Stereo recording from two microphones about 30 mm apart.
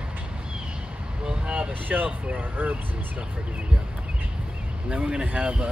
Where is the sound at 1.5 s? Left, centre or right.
Right.